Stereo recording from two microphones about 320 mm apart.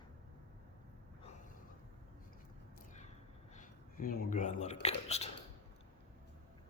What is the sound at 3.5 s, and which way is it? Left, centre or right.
Speech, left.